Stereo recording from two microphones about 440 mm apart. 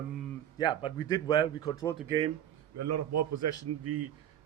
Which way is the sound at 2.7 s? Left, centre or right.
Right.